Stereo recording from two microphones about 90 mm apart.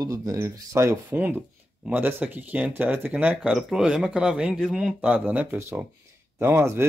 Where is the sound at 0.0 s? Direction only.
40° right (ahead or behind).